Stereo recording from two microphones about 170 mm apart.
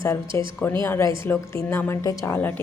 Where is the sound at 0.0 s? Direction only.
15° left (ahead or behind).